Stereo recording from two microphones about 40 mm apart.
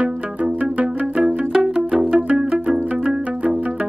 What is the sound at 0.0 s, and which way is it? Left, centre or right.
Pizzicato, right.